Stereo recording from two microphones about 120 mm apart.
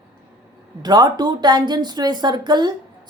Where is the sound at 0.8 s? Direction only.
35° right (ahead or behind).